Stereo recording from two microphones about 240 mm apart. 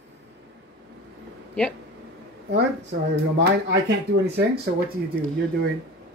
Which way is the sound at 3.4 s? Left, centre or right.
Right.